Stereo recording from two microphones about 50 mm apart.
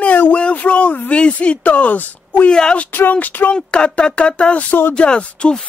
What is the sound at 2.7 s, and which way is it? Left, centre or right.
Speech, left.